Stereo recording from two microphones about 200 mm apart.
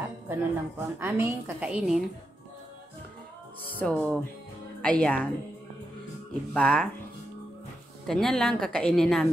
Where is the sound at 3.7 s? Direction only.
5° left (ahead or behind).